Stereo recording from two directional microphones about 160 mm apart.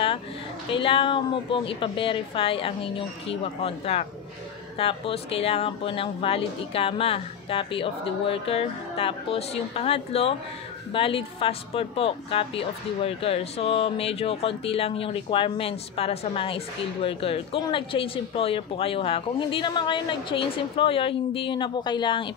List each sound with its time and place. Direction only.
0.7 s speech: 30° left (ahead or behind)